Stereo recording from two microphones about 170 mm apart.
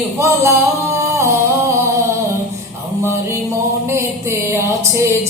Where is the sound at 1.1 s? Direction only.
15° right (ahead or behind).